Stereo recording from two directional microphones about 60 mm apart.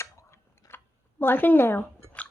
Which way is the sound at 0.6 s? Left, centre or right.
Left.